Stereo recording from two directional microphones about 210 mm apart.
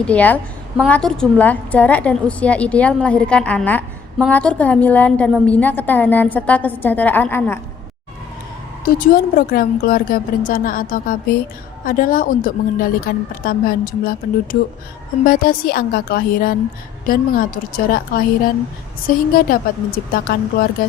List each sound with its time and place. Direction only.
0.0 s a woman's voice: 5° left (ahead or behind)
8.8 s a woman's voice: 40° left (ahead or behind)
15.2 s speech: 40° left (ahead or behind)